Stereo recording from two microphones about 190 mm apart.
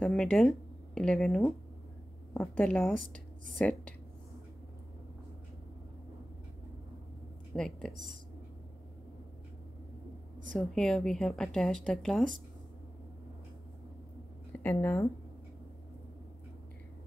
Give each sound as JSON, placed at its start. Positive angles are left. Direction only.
{"t": 0.0, "sound": "a woman's voice", "side_deg": 5}
{"t": 7.5, "sound": "a woman's voice", "side_deg": 5}
{"t": 10.7, "sound": "speech", "side_deg": 5}
{"t": 14.6, "sound": "a woman's voice", "side_deg": 10}